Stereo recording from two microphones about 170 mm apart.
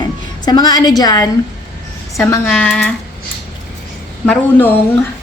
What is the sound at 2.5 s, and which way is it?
Speech, 10° left (ahead or behind).